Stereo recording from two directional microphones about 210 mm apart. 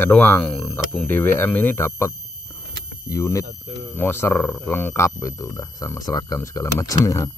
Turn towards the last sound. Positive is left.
turn(degrees=15)  # may be behind; listen again after turning